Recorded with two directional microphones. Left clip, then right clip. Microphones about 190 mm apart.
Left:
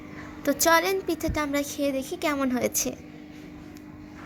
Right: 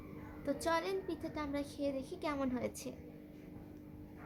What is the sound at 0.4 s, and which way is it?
A woman's voice, 30° left (ahead or behind).